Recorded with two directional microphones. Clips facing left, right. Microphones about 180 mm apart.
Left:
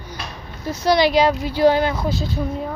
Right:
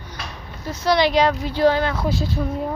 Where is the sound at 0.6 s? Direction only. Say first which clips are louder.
Left 2 dB; 10° left (ahead or behind).